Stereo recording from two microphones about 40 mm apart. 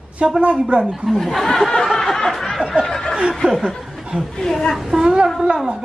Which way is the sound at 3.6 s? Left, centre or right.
Centre.